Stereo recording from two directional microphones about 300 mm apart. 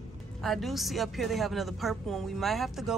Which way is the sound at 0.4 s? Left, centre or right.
Centre.